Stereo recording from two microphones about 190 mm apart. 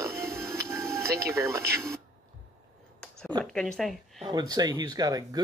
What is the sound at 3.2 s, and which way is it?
Speech, 5° left (ahead or behind).